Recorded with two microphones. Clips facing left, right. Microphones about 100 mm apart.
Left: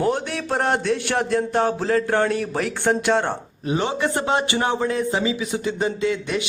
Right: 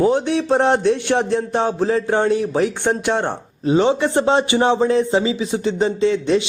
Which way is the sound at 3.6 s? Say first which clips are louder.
Right 7 dB; 25° right (ahead or behind).